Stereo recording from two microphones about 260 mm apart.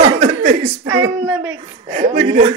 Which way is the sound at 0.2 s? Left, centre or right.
Right.